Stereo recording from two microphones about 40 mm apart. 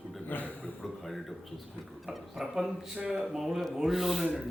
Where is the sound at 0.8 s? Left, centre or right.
Centre.